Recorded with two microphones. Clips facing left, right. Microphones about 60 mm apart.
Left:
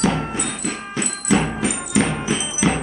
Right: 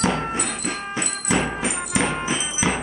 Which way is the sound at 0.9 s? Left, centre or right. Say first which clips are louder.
Left 4 dB; centre.